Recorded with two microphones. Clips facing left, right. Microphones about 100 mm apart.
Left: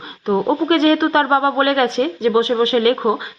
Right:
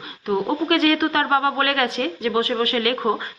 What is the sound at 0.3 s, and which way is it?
Speech, 30° left (ahead or behind).